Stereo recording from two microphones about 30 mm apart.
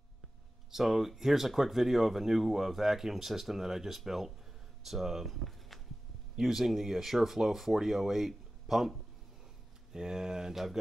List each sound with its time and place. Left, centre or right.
0.8 s speech: centre
9.9 s speech: right
10.5 s speech: centre